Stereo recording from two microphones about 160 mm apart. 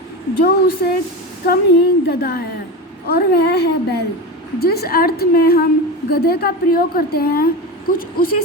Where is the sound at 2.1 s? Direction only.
75° left (ahead or behind).